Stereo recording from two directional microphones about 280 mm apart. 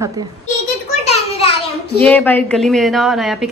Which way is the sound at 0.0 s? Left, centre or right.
Centre.